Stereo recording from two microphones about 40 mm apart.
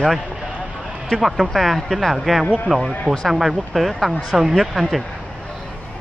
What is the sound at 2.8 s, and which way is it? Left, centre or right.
Speech, centre.